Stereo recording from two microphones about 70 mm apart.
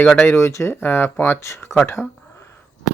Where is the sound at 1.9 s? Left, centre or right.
Left.